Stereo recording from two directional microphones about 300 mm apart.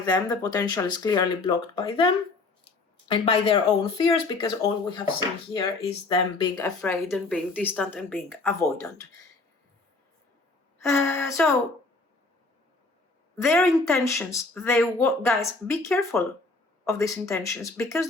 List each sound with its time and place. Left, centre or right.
0.0 s speech: centre
6.6 s speech: centre
10.8 s speech: centre
13.3 s speech: centre